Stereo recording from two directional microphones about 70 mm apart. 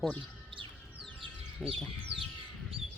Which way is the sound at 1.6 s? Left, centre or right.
Centre.